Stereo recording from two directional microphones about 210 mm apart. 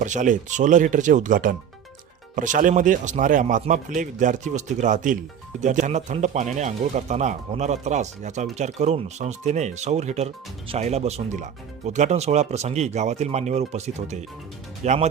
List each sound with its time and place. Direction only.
0.0 s speech: 35° right (ahead or behind)